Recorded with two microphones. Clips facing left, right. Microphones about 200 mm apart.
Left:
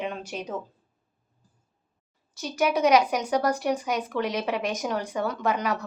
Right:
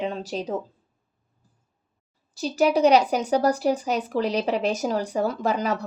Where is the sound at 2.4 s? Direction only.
35° right (ahead or behind).